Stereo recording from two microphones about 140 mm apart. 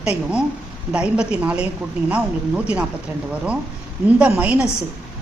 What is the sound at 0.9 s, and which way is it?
Speech, 10° right (ahead or behind).